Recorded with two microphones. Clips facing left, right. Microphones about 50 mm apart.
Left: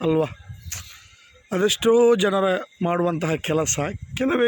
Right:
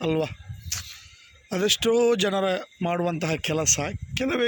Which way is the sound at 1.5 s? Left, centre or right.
Centre.